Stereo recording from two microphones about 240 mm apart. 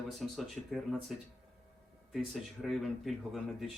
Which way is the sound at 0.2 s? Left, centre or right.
Centre.